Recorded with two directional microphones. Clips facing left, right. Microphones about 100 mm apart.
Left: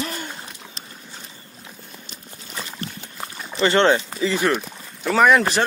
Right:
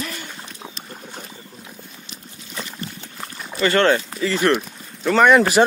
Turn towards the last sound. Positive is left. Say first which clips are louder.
# right 2 dB
turn(degrees=0)  # may be behind; listen again after turning